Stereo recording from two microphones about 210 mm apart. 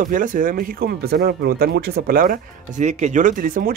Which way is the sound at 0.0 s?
40° right (ahead or behind).